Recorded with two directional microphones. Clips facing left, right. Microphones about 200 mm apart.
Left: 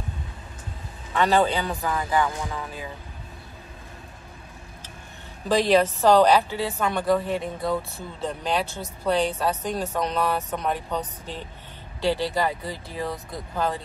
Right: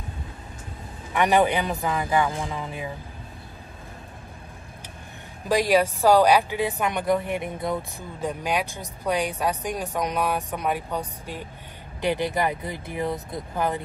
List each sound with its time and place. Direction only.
1.1 s a woman's voice: 15° right (ahead or behind)
5.5 s a woman's voice: 10° right (ahead or behind)